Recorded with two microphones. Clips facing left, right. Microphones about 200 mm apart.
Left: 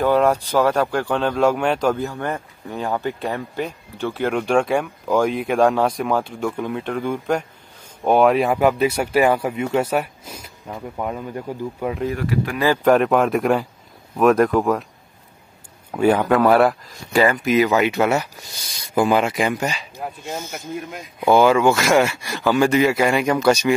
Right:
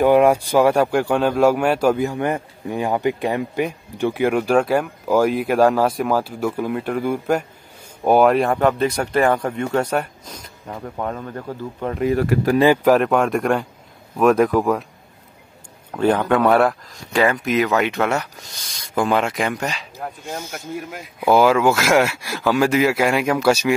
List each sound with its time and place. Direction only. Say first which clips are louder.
0.0 s speech: right 3 dB; 15° right (ahead or behind); by 12.0 s 10° left (ahead or behind)
12.2 s speech: right 5 dB; 40° right (ahead or behind)
12.8 s speech: even; centre (ahead or behind)
15.9 s speech: left 1 dB; 10° left (ahead or behind)
20.9 s speech: even; 5° right (ahead or behind)